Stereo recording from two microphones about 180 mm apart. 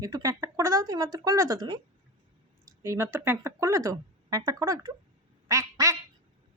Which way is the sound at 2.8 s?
15° right (ahead or behind).